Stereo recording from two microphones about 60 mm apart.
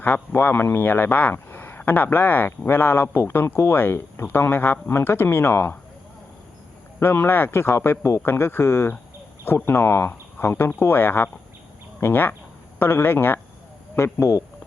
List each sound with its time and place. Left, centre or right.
0.0 s speech: left
7.0 s speech: left
8.2 s speech: left
13.9 s speech: left